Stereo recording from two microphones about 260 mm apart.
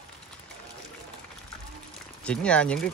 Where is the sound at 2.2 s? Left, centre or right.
Centre.